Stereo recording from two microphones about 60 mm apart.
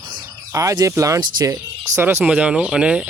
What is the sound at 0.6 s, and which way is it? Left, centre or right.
Speech, right.